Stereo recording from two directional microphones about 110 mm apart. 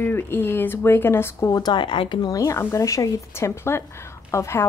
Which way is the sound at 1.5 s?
40° left (ahead or behind).